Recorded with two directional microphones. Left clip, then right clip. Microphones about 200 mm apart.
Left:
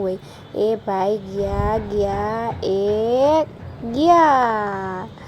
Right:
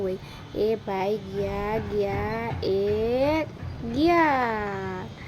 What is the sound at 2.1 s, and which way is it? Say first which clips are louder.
Speech: left 7 dB; 10° right (ahead or behind).